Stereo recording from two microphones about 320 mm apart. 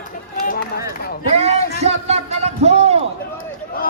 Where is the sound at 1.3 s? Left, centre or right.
Centre.